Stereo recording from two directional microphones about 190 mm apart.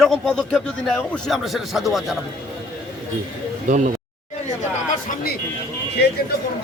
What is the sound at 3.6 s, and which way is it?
Speech, 40° right (ahead or behind).